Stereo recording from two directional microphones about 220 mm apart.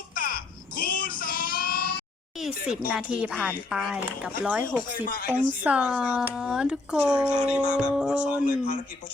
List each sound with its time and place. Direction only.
0.1 s a sound: 40° left (ahead or behind)
2.9 s speech: 5° right (ahead or behind)
8.4 s speech: 35° left (ahead or behind)